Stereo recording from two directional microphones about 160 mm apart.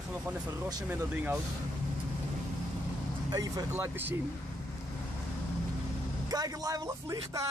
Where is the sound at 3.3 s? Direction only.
25° right (ahead or behind).